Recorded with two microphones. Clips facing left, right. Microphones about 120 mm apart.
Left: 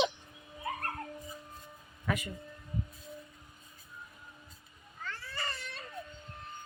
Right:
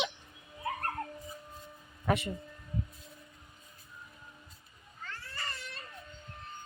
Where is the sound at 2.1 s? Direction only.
30° right (ahead or behind).